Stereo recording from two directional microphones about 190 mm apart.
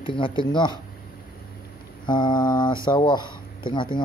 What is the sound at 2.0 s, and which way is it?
Mantra, 25° left (ahead or behind).